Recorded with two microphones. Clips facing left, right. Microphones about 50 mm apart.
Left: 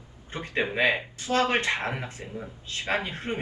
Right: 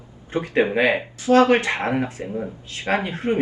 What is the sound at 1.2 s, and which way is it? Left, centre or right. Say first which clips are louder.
A man's voice: right 9 dB; right.